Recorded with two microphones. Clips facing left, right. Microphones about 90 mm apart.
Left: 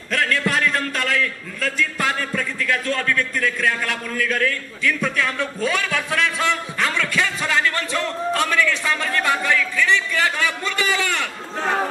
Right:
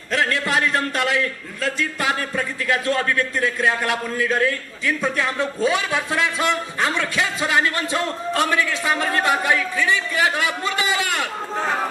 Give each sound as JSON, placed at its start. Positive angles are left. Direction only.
{"t": 0.1, "sound": "a man's voice", "side_deg": -20}